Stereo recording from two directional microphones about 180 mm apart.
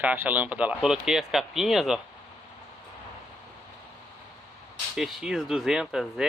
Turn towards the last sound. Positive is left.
turn(degrees=0)  # may be behind; listen again after turning